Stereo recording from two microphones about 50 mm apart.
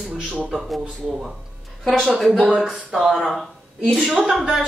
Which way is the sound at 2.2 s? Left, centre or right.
Centre.